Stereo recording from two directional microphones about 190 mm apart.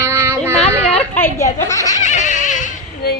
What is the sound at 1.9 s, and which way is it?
Goat, 40° left (ahead or behind).